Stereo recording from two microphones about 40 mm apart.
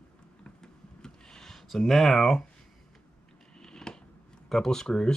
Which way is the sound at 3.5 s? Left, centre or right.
Centre.